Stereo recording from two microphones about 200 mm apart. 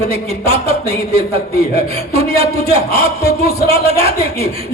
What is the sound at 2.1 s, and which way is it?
Speech, 30° right (ahead or behind).